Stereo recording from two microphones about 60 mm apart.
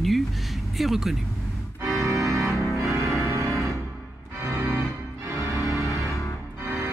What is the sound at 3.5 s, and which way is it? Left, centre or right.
Music, centre.